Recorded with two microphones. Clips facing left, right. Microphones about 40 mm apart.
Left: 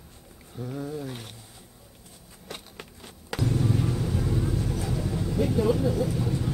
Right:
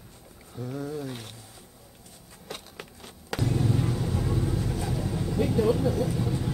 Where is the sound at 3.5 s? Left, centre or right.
Centre.